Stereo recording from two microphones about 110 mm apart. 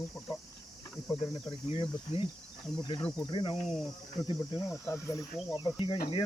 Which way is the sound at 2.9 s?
45° left (ahead or behind).